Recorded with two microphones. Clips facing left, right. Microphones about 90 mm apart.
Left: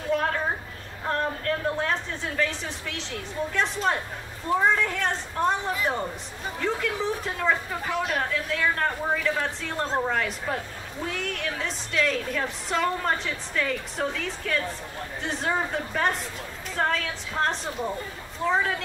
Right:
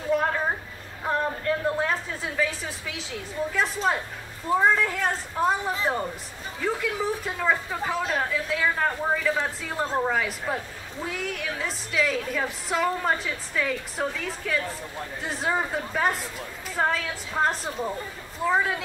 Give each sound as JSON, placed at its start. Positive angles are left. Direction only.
{"t": 0.1, "sound": "a sound", "side_deg": -5}
{"t": 1.0, "sound": "a woman's voice", "side_deg": -5}
{"t": 6.6, "sound": "a woman's voice", "side_deg": -5}
{"t": 7.8, "sound": "speech", "side_deg": -25}
{"t": 8.1, "sound": "a woman's voice", "side_deg": -5}